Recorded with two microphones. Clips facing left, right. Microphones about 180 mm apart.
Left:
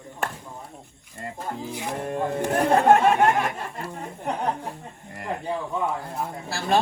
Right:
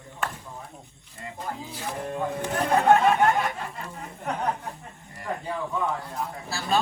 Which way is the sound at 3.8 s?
35° left (ahead or behind).